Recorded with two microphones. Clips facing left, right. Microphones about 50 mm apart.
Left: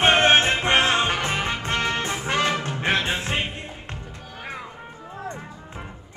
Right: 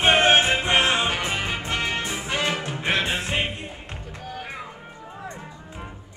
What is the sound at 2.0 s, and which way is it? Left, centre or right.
Music, left.